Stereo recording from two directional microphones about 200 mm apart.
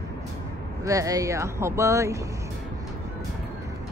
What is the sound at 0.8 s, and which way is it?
Speech, 15° right (ahead or behind).